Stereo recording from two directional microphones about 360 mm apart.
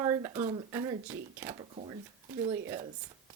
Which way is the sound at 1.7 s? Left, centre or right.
Centre.